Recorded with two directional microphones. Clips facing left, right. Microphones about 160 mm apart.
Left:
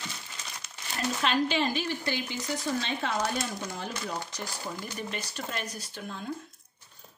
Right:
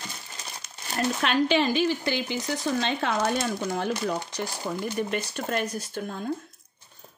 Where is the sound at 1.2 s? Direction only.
65° right (ahead or behind); by 2.4 s 85° right.